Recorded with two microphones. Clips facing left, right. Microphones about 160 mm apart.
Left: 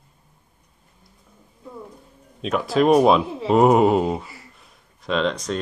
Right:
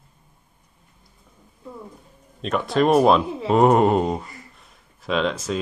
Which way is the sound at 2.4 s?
Centre (ahead or behind).